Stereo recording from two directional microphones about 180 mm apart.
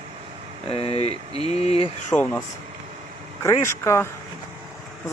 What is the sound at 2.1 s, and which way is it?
Speech, 10° left (ahead or behind).